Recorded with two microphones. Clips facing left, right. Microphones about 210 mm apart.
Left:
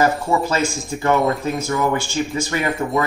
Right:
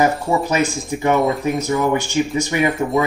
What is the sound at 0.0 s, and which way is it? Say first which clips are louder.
Speech: right 1 dB; 20° right (ahead or behind).